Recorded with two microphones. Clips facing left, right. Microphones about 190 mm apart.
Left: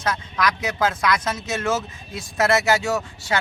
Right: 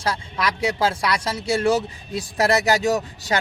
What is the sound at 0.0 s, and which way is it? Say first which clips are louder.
Speech: left 1 dB; 30° right (ahead or behind).